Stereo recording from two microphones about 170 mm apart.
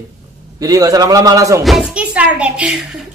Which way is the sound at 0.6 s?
20° right (ahead or behind).